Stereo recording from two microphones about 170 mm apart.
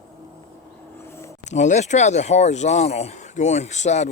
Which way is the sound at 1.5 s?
45° left (ahead or behind).